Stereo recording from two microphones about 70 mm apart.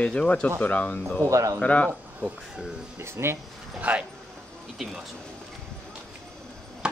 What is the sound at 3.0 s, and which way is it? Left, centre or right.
Speech, right.